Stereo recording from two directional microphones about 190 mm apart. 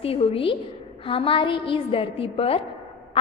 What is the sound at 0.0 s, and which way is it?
A woman's voice, 30° left (ahead or behind).